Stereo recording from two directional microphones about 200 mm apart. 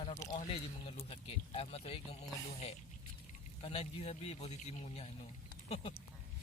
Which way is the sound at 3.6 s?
30° left (ahead or behind).